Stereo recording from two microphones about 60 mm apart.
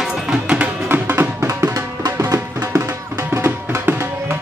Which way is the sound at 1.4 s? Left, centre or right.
Right.